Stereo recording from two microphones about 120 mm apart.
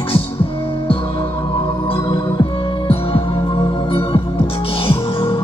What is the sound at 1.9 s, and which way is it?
Music, 45° left (ahead or behind).